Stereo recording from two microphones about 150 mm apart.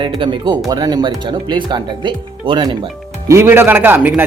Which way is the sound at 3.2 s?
20° right (ahead or behind).